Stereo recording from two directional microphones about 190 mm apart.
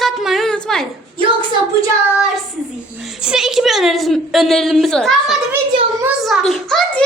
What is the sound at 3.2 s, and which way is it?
A woman's voice, 5° right (ahead or behind).